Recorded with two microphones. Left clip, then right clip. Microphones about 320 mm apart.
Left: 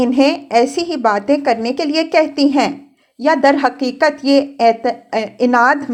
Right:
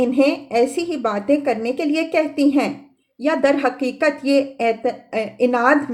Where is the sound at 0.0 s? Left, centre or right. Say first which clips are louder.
Left 3 dB; left.